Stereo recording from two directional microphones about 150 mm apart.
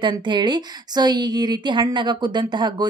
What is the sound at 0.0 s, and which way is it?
A woman's voice, 30° right (ahead or behind).